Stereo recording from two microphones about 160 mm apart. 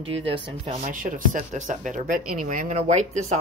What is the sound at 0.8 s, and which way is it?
Speech, 55° right (ahead or behind).